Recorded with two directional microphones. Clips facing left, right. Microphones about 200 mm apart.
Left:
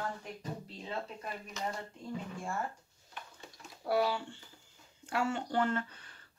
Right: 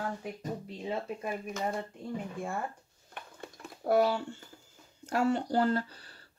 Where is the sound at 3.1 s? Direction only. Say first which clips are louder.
Right 4 dB; 55° right (ahead or behind).